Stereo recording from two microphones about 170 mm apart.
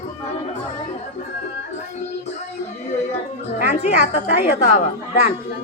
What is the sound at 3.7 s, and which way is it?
A woman's voice, 40° left (ahead or behind).